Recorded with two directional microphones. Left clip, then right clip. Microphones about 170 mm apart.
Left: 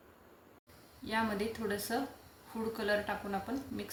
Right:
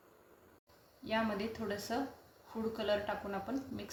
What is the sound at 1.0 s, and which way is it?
Speech, 35° right (ahead or behind).